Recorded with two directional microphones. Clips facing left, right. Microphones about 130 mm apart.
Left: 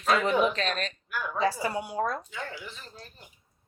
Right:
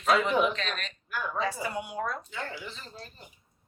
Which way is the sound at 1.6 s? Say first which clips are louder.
Left 3 dB; 40° left (ahead or behind).